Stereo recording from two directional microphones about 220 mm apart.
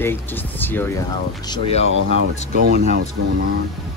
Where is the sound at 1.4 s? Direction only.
25° left (ahead or behind).